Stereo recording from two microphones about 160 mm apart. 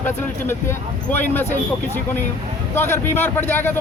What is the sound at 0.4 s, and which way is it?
Speech, 15° left (ahead or behind).